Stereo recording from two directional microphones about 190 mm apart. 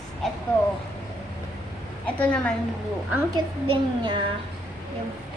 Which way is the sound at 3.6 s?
25° right (ahead or behind).